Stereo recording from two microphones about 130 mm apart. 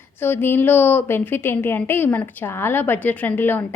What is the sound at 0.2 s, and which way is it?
A woman's voice, 15° left (ahead or behind).